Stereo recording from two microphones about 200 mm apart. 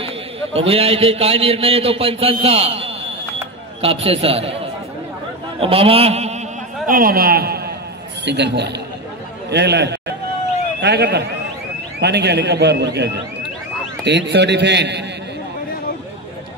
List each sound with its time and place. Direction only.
0.0 s a man's voice: 30° right (ahead or behind)
2.4 s a sound: 30° right (ahead or behind)
3.8 s a man's voice: 30° right (ahead or behind)
6.9 s a man's voice: 45° right (ahead or behind)